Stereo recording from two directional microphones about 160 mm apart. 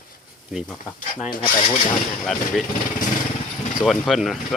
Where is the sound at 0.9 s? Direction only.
55° left (ahead or behind).